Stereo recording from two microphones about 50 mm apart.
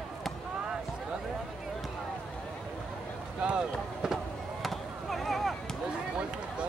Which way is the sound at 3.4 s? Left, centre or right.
Centre.